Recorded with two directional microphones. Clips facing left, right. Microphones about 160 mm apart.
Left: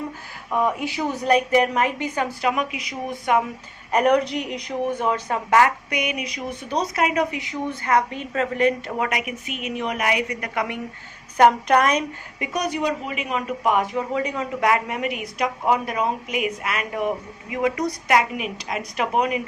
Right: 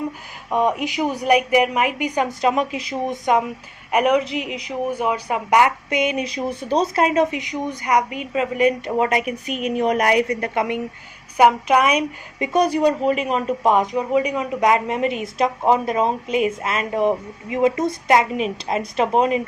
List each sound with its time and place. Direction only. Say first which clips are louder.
0.5 s speech: right 3 dB; 20° right (ahead or behind)
3.9 s speech: right 1 dB; 5° right (ahead or behind)
9.0 s a woman's voice: right 6 dB; 30° right (ahead or behind)
11.3 s speech: right 1 dB; 10° right (ahead or behind)
12.4 s speech: right 7 dB; 30° right (ahead or behind)